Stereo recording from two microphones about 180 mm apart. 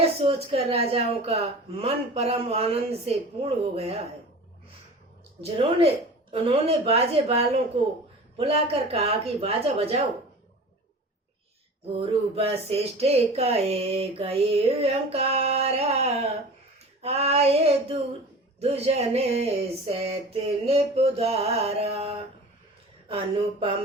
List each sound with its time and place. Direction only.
0.2 s a woman's voice: 35° right (ahead or behind)
6.3 s a woman's voice: 30° right (ahead or behind)
11.9 s a woman's voice: 35° right (ahead or behind)